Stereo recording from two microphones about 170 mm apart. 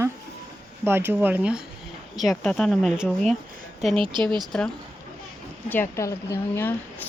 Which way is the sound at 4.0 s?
30° right (ahead or behind).